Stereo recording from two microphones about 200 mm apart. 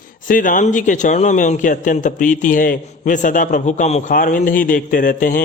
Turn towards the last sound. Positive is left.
turn(degrees=40)  # may be behind; listen again after turning